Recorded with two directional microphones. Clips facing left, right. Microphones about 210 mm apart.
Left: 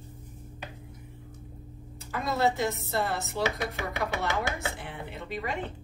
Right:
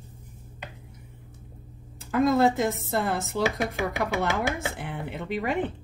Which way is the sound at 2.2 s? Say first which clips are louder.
Right 6 dB; 50° right (ahead or behind).